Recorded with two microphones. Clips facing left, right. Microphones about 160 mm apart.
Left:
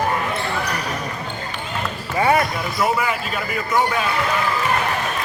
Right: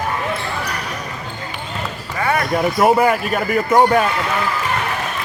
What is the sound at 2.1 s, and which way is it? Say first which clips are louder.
Basketball bounce: left 3 dB; 20° left (ahead or behind).